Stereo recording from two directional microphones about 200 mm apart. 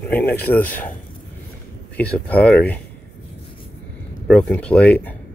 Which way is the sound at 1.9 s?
5° left (ahead or behind).